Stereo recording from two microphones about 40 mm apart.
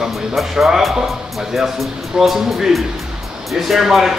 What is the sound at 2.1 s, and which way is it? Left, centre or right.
Speech, centre.